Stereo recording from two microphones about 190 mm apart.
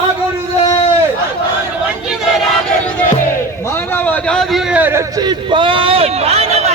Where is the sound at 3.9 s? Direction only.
10° left (ahead or behind); by 5.0 s 10° right (ahead or behind).